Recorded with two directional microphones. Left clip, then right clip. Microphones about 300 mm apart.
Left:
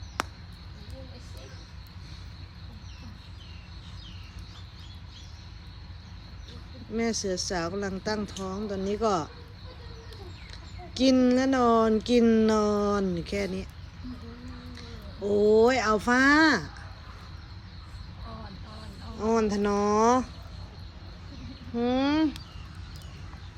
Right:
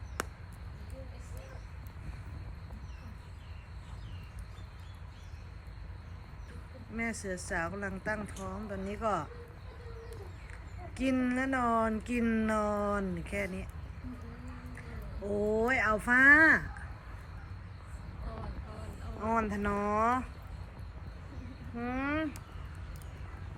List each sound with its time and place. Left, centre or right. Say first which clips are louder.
6.9 s speech: left 8 dB; centre
11.1 s speech: left 8 dB; centre
15.3 s speech: left 9 dB; centre
19.2 s speech: left 6 dB; centre
21.8 s speech: left 9 dB; centre